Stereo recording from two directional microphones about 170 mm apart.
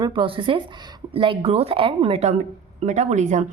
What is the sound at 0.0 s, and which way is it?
Speech, 30° right (ahead or behind).